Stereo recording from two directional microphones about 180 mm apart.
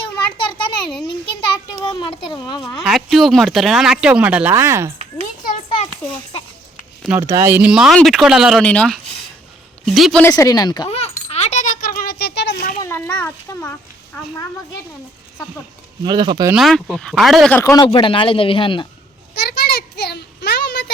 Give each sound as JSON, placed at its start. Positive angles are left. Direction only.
{"t": 0.3, "sound": "a sound", "side_deg": 25}
{"t": 1.8, "sound": "speech", "side_deg": 25}
{"t": 2.8, "sound": "speech", "side_deg": 0}
{"t": 5.2, "sound": "children playing", "side_deg": 45}
{"t": 7.2, "sound": "speech", "side_deg": -15}
{"t": 10.2, "sound": "speech", "side_deg": 20}
{"t": 10.8, "sound": "a sound", "side_deg": 35}
{"t": 12.8, "sound": "a sound", "side_deg": 10}
{"t": 16.0, "sound": "speech", "side_deg": -25}
{"t": 16.5, "sound": "speech", "side_deg": 0}
{"t": 17.6, "sound": "speech", "side_deg": 15}
{"t": 17.8, "sound": "speech", "side_deg": 30}
{"t": 19.3, "sound": "a sound", "side_deg": 65}